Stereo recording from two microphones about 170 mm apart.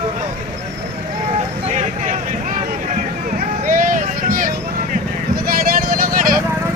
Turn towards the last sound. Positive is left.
turn(degrees=-55)  # may be behind; listen again after turning